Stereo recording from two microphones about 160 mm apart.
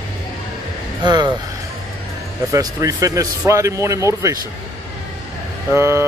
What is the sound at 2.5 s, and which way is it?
Speech, 20° right (ahead or behind).